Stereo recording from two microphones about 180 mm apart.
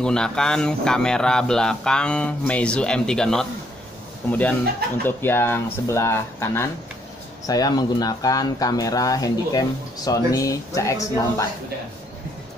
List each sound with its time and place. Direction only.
0.0 s speech: 5° left (ahead or behind)